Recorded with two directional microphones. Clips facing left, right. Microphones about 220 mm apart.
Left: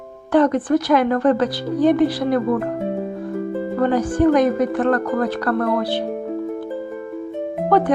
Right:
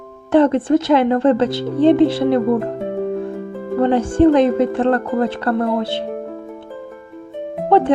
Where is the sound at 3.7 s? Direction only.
25° right (ahead or behind).